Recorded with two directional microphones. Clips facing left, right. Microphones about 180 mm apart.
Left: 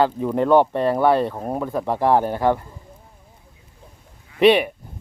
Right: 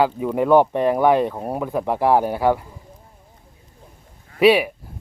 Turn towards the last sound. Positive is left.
turn(degrees=-5)  # may be behind; listen again after turning